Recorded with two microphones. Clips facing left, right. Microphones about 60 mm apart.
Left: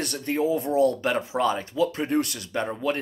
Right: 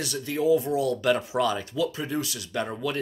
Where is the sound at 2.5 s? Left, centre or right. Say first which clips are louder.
Left 3 dB; left.